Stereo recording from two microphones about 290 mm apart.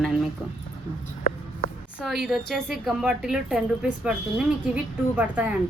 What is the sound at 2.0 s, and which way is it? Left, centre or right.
A woman's voice, centre.